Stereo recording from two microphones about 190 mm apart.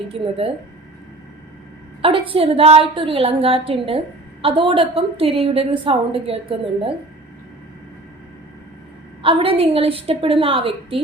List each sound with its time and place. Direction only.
0.1 s a woman's voice: 30° right (ahead or behind)
2.0 s a woman's voice: 30° right (ahead or behind)
9.2 s a woman's voice: 30° right (ahead or behind)